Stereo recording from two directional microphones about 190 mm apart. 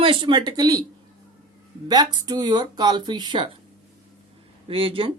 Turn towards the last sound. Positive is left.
turn(degrees=-30)  # may be behind; listen again after turning